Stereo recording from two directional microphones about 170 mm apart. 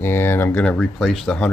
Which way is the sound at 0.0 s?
15° left (ahead or behind).